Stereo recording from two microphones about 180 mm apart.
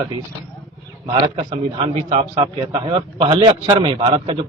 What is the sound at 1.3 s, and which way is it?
A man's voice, 30° right (ahead or behind).